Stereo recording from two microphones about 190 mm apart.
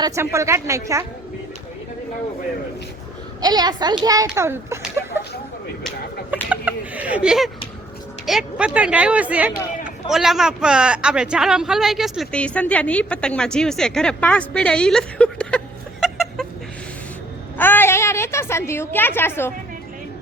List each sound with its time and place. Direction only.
0.0 s speech: 15° right (ahead or behind)
3.4 s a woman's voice: 20° right (ahead or behind)
4.3 s a sound: 10° right (ahead or behind)
6.3 s a sound: 10° right (ahead or behind)
8.3 s a man's voice: 5° right (ahead or behind)
17.6 s a woman's voice: 10° left (ahead or behind)